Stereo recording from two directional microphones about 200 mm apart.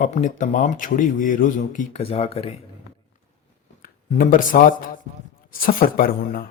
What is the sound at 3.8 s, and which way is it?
Speech, 45° left (ahead or behind).